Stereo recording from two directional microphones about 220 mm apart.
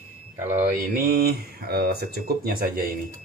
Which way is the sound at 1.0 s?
40° right (ahead or behind).